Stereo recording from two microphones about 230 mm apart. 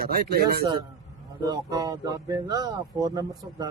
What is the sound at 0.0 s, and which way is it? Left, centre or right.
Speech, right.